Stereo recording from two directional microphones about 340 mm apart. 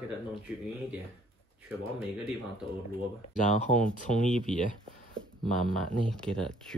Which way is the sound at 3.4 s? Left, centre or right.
Left.